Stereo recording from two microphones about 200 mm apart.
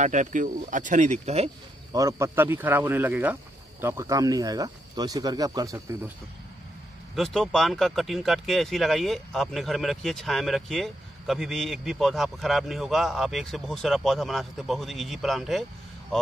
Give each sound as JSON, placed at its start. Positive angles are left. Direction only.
{"t": 0.0, "sound": "speech", "side_deg": -40}
{"t": 1.9, "sound": "speech", "side_deg": -15}
{"t": 7.2, "sound": "speech", "side_deg": 0}